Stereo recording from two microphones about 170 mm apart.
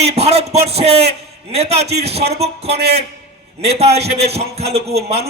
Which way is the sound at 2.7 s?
70° right (ahead or behind).